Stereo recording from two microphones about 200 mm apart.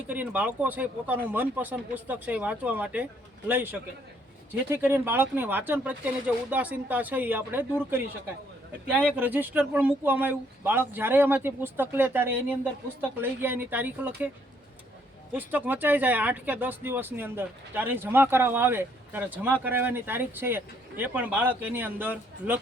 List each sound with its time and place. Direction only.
0.1 s speech: 10° right (ahead or behind)
9.0 s speech: 10° right (ahead or behind)
15.3 s speech: 10° right (ahead or behind)